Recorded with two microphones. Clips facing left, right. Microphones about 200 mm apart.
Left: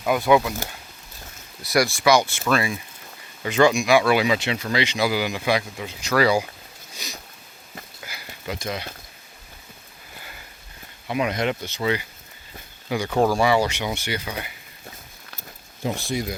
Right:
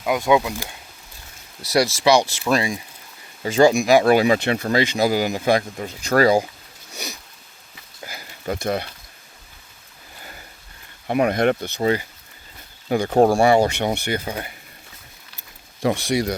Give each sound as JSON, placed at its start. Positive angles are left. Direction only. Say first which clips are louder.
{"t": 0.0, "sound": "speech", "louder": "even", "side_deg": -15}
{"t": 2.1, "sound": "speech", "louder": "right 2 dB", "side_deg": -25}
{"t": 3.4, "sound": "speech", "louder": "right 3 dB", "side_deg": -40}
{"t": 8.0, "sound": "a sound", "louder": "right 6 dB", "side_deg": -45}
{"t": 8.6, "sound": "speech", "louder": "right 7 dB", "side_deg": -55}
{"t": 11.0, "sound": "speech", "louder": "right 5 dB", "side_deg": -55}
{"t": 15.8, "sound": "speech", "louder": "right 6 dB", "side_deg": -75}